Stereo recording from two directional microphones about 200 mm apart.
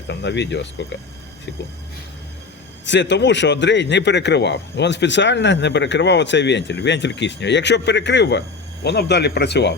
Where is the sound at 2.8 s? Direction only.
65° left (ahead or behind).